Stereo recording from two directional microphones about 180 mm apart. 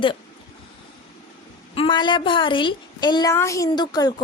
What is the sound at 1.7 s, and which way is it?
A woman's voice, 30° left (ahead or behind).